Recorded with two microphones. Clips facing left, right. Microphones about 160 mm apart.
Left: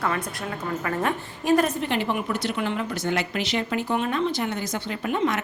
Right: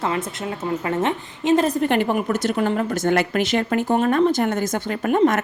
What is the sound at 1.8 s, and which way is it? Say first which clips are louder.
Speech: right 6 dB; 50° right (ahead or behind).